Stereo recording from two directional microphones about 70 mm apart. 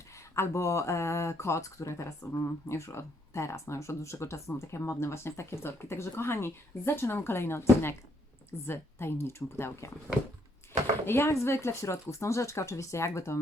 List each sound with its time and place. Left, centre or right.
0.3 s speech: left
11.0 s speech: left